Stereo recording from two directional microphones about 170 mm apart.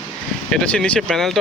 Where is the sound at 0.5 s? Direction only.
5° left (ahead or behind).